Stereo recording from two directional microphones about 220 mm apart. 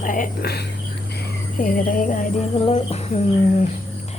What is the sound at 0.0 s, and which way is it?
Speech, 35° left (ahead or behind).